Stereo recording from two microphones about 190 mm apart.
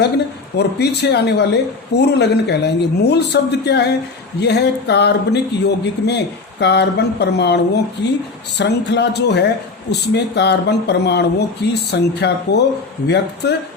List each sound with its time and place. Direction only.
0.5 s speech: 60° left (ahead or behind)